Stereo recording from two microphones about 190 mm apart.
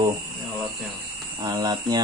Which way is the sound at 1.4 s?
20° right (ahead or behind).